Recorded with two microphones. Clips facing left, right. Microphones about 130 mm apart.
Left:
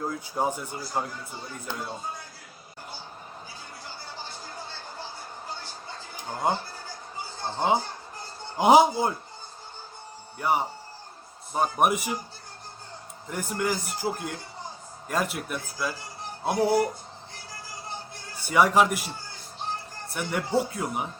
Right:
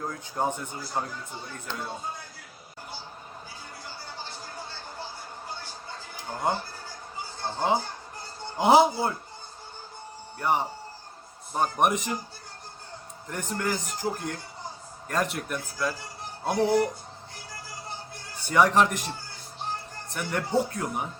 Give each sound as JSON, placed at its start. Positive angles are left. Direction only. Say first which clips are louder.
{"t": 0.0, "sound": "a man's voice", "louder": "left 1 dB", "side_deg": 10}
{"t": 6.4, "sound": "a man's voice", "louder": "left 1 dB", "side_deg": 15}
{"t": 8.5, "sound": "a man's voice", "louder": "left 1 dB", "side_deg": 15}
{"t": 10.3, "sound": "a man's voice", "louder": "left 1 dB", "side_deg": 5}
{"t": 13.2, "sound": "a man's voice", "louder": "left 2 dB", "side_deg": 10}
{"t": 18.4, "sound": "a man's voice", "louder": "even", "side_deg": 5}